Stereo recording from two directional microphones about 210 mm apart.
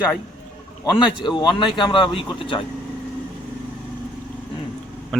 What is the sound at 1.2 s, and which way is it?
Speech, 20° left (ahead or behind).